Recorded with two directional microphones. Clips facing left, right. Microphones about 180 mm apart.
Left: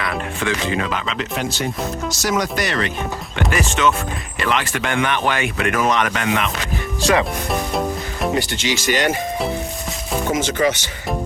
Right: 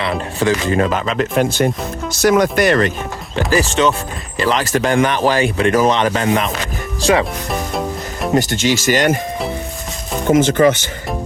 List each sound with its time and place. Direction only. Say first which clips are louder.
0.0 s speech: right 5 dB; 30° right (ahead or behind); by 2.9 s 50° right (ahead or behind)
3.3 s speech: right 6 dB; 35° right (ahead or behind)
7.5 s music: even; centre (ahead or behind)
8.4 s speech: right 5 dB; 45° right (ahead or behind)
10.3 s speech: right 8 dB; 55° right (ahead or behind)